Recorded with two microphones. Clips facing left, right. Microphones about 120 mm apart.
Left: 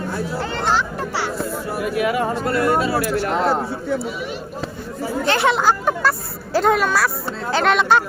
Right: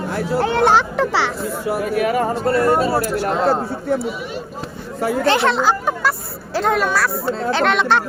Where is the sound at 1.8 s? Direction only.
45° right (ahead or behind).